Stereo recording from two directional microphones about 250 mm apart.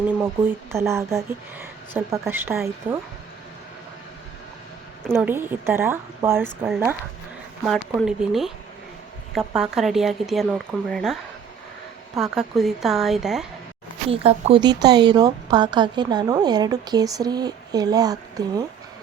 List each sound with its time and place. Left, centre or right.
0.0 s a woman's voice: centre
5.1 s a woman's voice: centre
9.6 s speech: centre
14.1 s a woman's voice: right